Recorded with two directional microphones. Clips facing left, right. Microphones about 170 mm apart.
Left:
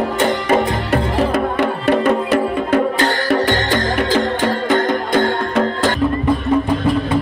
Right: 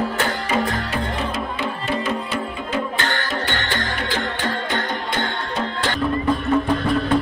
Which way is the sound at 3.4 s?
40° left (ahead or behind).